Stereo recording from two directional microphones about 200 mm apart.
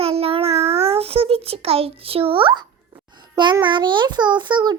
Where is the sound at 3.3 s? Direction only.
20° right (ahead or behind).